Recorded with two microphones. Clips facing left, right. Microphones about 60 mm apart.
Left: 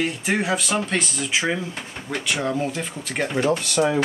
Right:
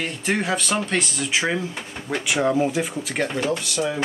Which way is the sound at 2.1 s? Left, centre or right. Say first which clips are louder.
Right 4 dB; centre.